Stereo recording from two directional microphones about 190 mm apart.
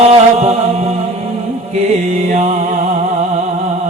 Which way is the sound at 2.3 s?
40° right (ahead or behind).